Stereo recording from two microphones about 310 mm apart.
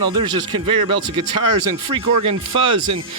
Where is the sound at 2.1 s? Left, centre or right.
Right.